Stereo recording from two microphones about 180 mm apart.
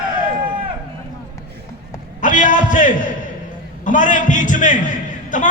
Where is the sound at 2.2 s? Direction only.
45° left (ahead or behind).